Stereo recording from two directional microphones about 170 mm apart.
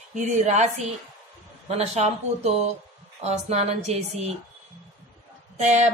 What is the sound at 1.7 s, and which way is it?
Speech, 40° right (ahead or behind).